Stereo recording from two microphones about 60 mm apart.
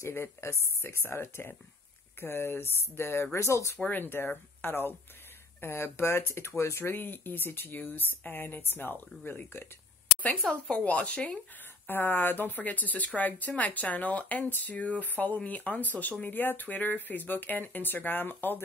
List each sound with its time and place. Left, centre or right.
0.0 s speech: left
3.8 s speech: left
10.4 s speech: centre
11.9 s speech: left